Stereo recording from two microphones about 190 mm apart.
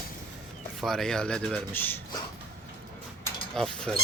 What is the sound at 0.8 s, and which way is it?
Speech, centre (ahead or behind).